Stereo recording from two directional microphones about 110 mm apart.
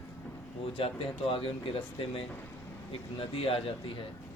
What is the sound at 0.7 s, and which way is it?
Speech, 55° left (ahead or behind).